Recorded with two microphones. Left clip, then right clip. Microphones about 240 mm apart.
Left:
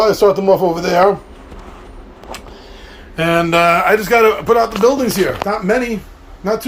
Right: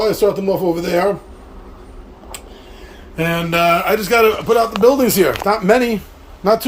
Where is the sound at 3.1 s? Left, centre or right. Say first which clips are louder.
Left 4 dB; centre.